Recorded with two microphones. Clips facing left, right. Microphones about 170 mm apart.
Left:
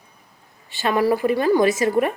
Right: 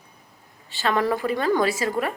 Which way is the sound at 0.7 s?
15° left (ahead or behind).